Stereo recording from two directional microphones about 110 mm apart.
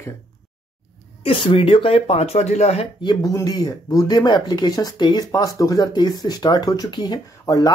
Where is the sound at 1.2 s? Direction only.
55° left (ahead or behind); by 2.9 s 75° left (ahead or behind).